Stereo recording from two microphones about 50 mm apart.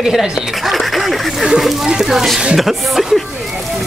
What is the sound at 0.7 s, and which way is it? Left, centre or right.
Speech, centre.